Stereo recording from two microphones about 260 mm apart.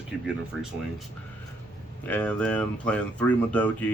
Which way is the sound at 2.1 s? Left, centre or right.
Centre.